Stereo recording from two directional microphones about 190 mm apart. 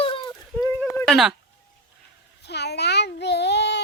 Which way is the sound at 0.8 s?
5° left (ahead or behind).